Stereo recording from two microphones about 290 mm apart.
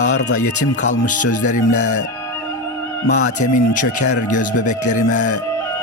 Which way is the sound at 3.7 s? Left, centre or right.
Left.